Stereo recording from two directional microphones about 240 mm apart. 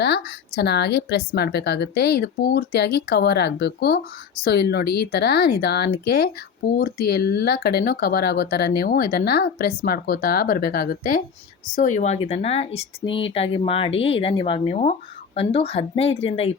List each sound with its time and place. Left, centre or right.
0.0 s speech: left